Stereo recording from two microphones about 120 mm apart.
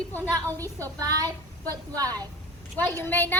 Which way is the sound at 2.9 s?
15° left (ahead or behind).